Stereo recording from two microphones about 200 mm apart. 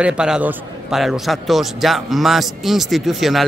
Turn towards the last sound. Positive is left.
turn(degrees=0)  # may be behind; listen again after turning